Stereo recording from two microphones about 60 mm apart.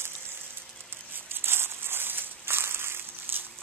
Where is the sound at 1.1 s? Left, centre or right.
Right.